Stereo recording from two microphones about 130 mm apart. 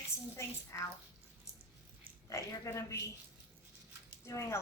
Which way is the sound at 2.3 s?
25° left (ahead or behind).